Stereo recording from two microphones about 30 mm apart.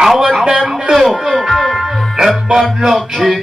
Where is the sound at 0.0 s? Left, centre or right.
Centre.